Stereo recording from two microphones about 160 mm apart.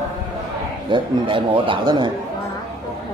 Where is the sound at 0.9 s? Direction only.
30° right (ahead or behind).